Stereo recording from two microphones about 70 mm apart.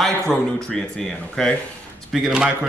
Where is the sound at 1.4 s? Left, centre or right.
Centre.